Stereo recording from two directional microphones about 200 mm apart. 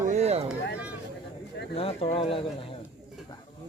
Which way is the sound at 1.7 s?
30° left (ahead or behind).